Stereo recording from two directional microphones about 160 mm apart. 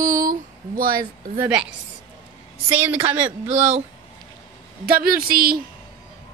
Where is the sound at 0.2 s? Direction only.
60° right (ahead or behind).